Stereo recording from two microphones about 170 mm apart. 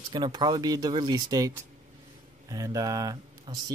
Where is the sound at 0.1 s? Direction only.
25° right (ahead or behind).